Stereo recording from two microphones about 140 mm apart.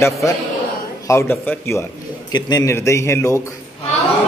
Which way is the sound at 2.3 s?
30° left (ahead or behind).